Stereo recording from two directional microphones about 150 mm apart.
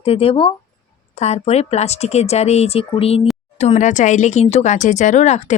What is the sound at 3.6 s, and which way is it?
Speech, 50° left (ahead or behind).